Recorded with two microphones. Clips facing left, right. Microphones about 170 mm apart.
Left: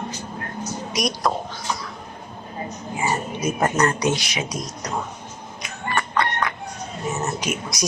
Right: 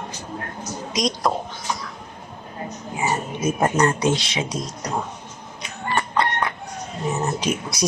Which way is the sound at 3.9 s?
25° right (ahead or behind).